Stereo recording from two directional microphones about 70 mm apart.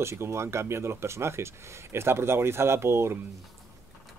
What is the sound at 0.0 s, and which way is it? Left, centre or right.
Speech, right.